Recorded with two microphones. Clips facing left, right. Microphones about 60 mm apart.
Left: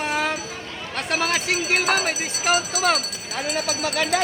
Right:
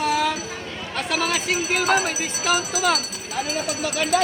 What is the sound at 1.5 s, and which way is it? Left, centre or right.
Speech, left.